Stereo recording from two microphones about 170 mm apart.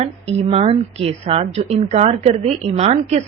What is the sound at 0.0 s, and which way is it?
A woman's voice, 40° right (ahead or behind).